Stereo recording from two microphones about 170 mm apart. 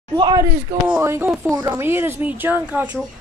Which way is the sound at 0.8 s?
15° right (ahead or behind).